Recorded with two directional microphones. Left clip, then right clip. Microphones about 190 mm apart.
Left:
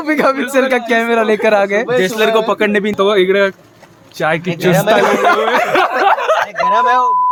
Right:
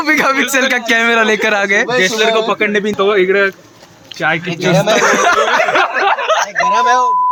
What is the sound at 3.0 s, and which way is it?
Speech, 60° left (ahead or behind).